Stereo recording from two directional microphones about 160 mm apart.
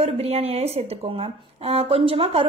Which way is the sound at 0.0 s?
40° right (ahead or behind).